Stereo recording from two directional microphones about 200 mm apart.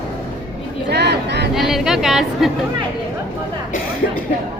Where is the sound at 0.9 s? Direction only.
55° right (ahead or behind).